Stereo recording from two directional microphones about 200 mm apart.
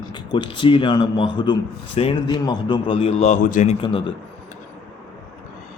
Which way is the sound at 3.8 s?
25° left (ahead or behind).